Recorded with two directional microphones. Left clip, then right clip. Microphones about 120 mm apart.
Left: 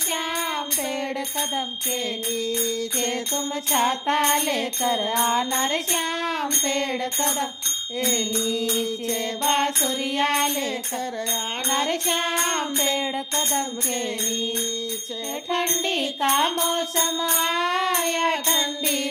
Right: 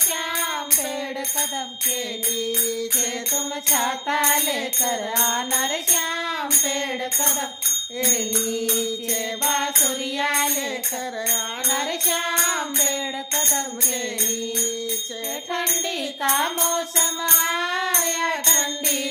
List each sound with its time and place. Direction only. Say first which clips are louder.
3.0 s music: even; 30° left (ahead or behind)
9.4 s music: left 1 dB; 25° left (ahead or behind)
11.7 s music: left 1 dB; 25° left (ahead or behind)
16.2 s music: left 1 dB; 25° left (ahead or behind)